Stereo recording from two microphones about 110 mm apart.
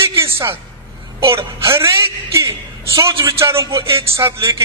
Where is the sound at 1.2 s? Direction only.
25° right (ahead or behind).